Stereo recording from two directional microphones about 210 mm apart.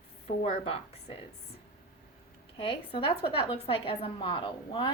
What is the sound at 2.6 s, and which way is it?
A woman's voice, 25° left (ahead or behind).